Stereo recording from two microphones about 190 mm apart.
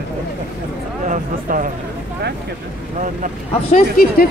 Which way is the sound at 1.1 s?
45° right (ahead or behind).